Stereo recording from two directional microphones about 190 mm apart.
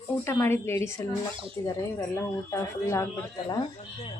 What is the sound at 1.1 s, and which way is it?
Speech, 30° right (ahead or behind).